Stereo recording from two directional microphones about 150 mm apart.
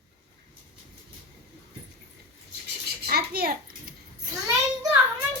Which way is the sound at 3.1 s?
90° right.